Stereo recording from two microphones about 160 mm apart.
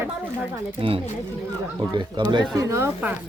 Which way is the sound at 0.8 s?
35° right (ahead or behind).